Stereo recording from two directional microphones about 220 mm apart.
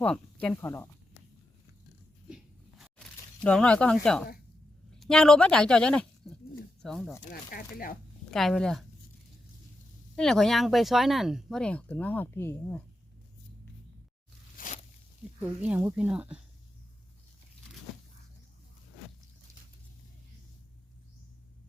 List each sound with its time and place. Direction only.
0.0 s speech: 5° left (ahead or behind)
2.3 s a sound: centre (ahead or behind)
4.9 s speech: centre (ahead or behind)
7.3 s speech: 40° left (ahead or behind)
8.3 s speech: centre (ahead or behind)
10.2 s speech: centre (ahead or behind)
14.6 s zipper: 40° left (ahead or behind)
15.4 s speech: 5° right (ahead or behind)